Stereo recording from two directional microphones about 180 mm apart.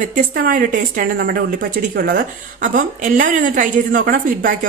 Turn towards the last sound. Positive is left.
turn(degrees=-50)  # may be behind; listen again after turning